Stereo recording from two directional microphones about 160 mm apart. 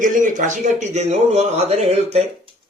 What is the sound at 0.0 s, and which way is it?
A man's voice, 55° right (ahead or behind).